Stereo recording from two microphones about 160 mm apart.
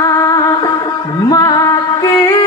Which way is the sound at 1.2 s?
25° left (ahead or behind).